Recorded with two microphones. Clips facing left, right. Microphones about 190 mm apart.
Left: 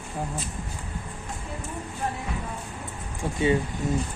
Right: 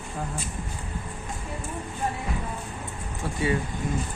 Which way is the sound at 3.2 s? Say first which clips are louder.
Left 3 dB; 25° left (ahead or behind).